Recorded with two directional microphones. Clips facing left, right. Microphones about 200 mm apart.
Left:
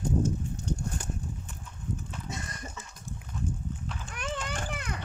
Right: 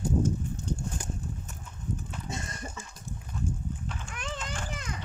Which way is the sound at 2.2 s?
25° right (ahead or behind).